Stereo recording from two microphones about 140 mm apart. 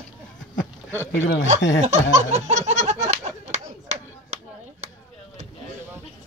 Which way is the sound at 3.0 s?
55° right (ahead or behind).